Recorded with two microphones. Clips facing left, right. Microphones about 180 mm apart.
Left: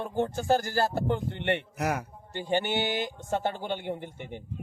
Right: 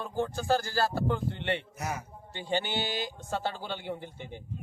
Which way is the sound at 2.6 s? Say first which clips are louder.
Left 4 dB; 55° left (ahead or behind).